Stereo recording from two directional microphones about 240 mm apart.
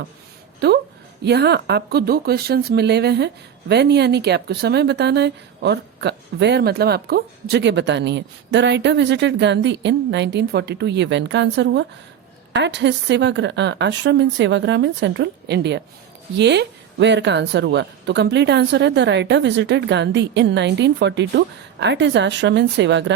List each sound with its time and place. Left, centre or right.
0.6 s speech: right